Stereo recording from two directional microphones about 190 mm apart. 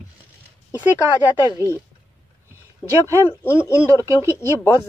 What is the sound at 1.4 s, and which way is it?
Speech, 20° left (ahead or behind).